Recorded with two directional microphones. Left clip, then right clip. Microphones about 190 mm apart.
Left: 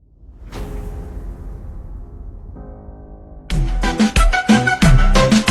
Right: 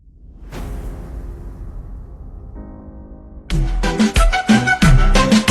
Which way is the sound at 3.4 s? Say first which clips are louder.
Even; centre (ahead or behind).